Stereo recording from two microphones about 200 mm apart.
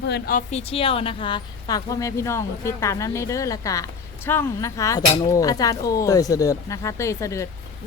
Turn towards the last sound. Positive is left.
turn(degrees=15)  # may be behind; listen again after turning